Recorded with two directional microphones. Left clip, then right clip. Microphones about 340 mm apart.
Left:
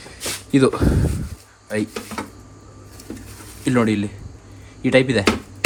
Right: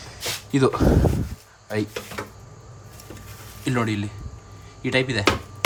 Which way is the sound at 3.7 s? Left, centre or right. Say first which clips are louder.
Left 6 dB; centre.